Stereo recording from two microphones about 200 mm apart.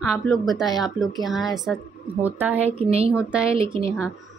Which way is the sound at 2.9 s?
30° right (ahead or behind).